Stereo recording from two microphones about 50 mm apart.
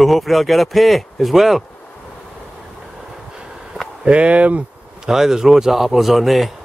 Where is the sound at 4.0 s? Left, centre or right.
Right.